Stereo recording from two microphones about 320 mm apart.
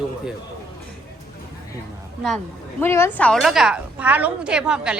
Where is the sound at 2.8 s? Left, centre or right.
Centre.